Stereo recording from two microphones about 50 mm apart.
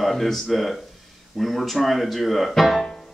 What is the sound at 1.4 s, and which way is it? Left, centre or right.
Speech, centre.